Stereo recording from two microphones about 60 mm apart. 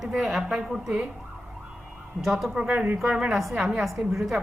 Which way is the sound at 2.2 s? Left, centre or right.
Centre.